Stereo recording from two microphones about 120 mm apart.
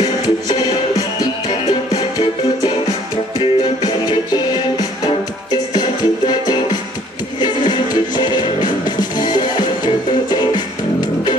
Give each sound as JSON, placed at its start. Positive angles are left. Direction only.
{"t": 0.0, "sound": "music", "side_deg": 35}